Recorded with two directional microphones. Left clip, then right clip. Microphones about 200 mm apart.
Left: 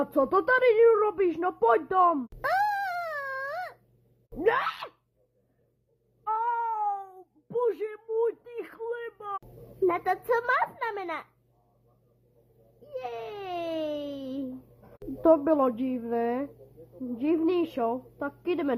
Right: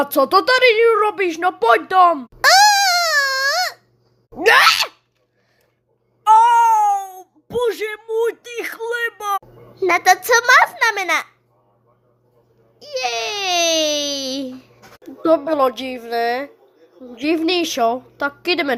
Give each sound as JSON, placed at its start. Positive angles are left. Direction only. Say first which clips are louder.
{"t": 0.0, "sound": "speech", "louder": "right 10 dB", "side_deg": -20}
{"t": 0.3, "sound": "a woman's voice", "louder": "right 10 dB", "side_deg": -5}
{"t": 2.4, "sound": "a sound", "louder": "right 17 dB", "side_deg": -10}
{"t": 4.4, "sound": "a woman's voice", "louder": "right 15 dB", "side_deg": -15}
{"t": 6.6, "sound": "cat", "louder": "right 17 dB", "side_deg": -25}
{"t": 6.9, "sound": "a sound", "louder": "right 14 dB", "side_deg": -20}
{"t": 9.8, "sound": "a woman's voice", "louder": "right 12 dB", "side_deg": -15}
{"t": 12.9, "sound": "baby cry", "louder": "right 14 dB", "side_deg": -15}
{"t": 15.3, "sound": "a woman's voice", "louder": "right 6 dB", "side_deg": -10}